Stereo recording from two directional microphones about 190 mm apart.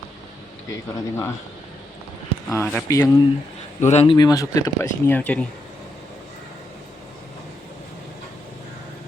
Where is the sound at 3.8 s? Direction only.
35° left (ahead or behind).